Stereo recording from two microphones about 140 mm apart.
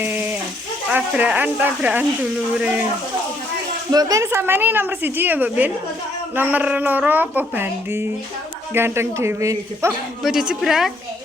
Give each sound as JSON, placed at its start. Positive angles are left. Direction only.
{"t": 0.0, "sound": "a sound", "side_deg": -15}
{"t": 0.9, "sound": "a woman's voice", "side_deg": -10}
{"t": 3.9, "sound": "a woman's voice", "side_deg": -20}
{"t": 10.2, "sound": "speech", "side_deg": -5}